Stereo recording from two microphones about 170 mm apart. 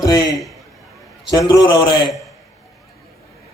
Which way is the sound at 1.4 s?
25° left (ahead or behind).